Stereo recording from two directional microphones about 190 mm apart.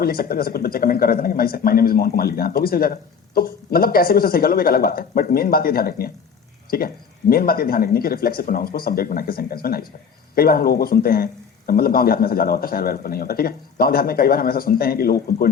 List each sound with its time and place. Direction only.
0.0 s speech: 50° left (ahead or behind)